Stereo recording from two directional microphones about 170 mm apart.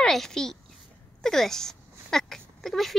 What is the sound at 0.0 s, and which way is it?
A child's voice, 5° left (ahead or behind).